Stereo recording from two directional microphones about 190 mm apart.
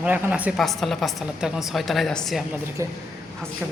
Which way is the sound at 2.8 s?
15° right (ahead or behind).